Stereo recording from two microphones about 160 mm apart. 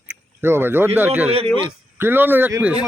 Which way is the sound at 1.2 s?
40° right (ahead or behind).